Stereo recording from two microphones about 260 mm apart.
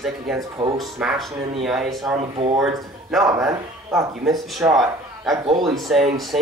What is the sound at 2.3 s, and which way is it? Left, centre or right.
Speech, right.